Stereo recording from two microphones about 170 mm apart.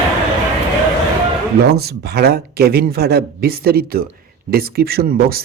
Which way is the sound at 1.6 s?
70° right (ahead or behind).